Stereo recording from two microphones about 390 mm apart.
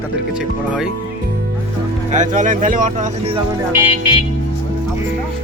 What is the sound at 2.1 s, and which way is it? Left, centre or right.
Speech, centre.